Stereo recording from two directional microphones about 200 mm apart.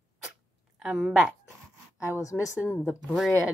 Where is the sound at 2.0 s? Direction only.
15° left (ahead or behind).